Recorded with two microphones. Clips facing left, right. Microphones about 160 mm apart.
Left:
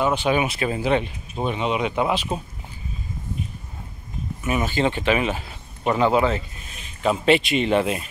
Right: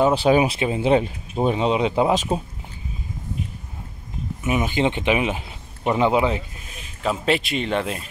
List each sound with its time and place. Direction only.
0.0 s speech: 35° right (ahead or behind)
0.6 s speech: 20° right (ahead or behind)
1.4 s speech: 30° right (ahead or behind)
4.4 s speech: 15° right (ahead or behind)
7.0 s speech: centre (ahead or behind)